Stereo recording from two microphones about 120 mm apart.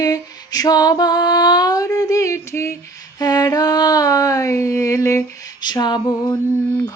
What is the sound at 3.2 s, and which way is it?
Female singing, 35° left (ahead or behind).